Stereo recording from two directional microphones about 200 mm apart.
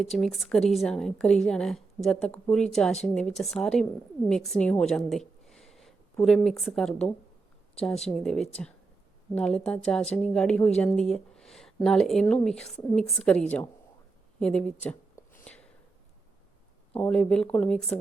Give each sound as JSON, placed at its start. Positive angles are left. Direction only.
{"t": 0.0, "sound": "a woman's voice", "side_deg": 0}
{"t": 16.9, "sound": "a woman's voice", "side_deg": 5}